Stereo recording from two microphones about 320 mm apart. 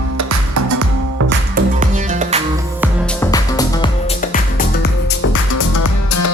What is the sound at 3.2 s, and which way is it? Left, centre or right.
Music, centre.